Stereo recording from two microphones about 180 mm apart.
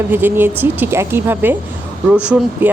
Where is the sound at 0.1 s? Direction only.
10° right (ahead or behind).